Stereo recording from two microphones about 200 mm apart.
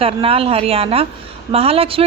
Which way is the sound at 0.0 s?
30° right (ahead or behind).